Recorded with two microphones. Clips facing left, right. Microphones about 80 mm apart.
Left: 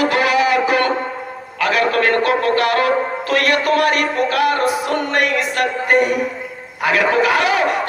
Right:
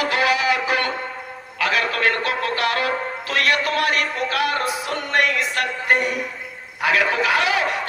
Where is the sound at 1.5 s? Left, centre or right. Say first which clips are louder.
Left 5 dB; left.